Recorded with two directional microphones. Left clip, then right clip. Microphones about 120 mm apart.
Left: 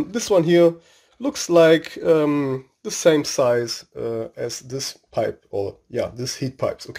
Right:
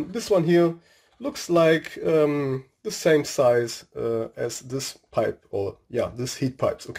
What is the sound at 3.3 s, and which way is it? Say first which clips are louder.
Speech: left 1 dB; 25° left (ahead or behind).